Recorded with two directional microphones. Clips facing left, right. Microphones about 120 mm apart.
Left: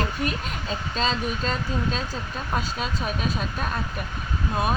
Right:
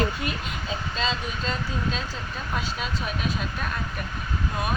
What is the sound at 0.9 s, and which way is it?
Speech, 40° left (ahead or behind).